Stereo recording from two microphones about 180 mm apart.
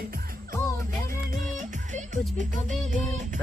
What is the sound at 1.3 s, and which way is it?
Music, 45° right (ahead or behind).